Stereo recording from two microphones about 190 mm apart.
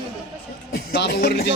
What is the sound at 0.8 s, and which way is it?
Speech, 55° left (ahead or behind).